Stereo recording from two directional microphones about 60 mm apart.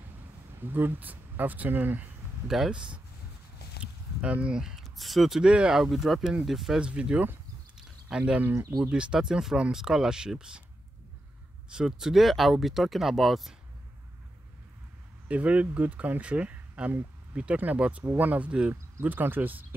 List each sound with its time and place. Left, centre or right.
0.7 s speech: right
2.4 s speech: centre
3.8 s a sound: right
4.7 s speech: centre
5.5 s speech: centre
5.8 s speech: centre
6.8 s speech: centre
8.5 s speech: right
8.8 s speech: centre
11.7 s speech: centre
15.2 s speech: right
19.0 s speech: right